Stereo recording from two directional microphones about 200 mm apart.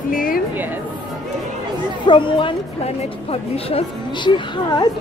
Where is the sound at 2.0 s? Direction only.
25° left (ahead or behind).